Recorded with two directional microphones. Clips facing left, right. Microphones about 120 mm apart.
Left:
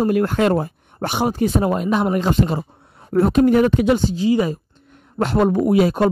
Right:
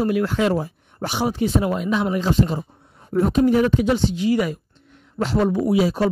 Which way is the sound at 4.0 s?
40° left (ahead or behind).